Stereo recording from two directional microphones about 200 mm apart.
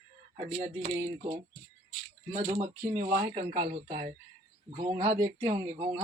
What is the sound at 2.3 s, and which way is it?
Speech, 35° right (ahead or behind).